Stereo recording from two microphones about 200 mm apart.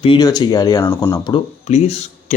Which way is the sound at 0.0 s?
20° left (ahead or behind).